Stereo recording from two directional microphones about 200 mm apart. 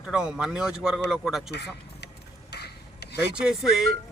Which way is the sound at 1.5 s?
55° left (ahead or behind).